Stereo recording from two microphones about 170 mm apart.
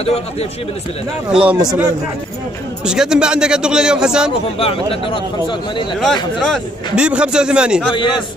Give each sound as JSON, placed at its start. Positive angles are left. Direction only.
{"t": 0.0, "sound": "a man's voice", "side_deg": 35}
{"t": 1.3, "sound": "a man's voice", "side_deg": -5}
{"t": 2.8, "sound": "speech", "side_deg": -5}
{"t": 4.6, "sound": "a man's voice", "side_deg": 35}
{"t": 6.4, "sound": "speech", "side_deg": 0}
{"t": 7.9, "sound": "a man's voice", "side_deg": 30}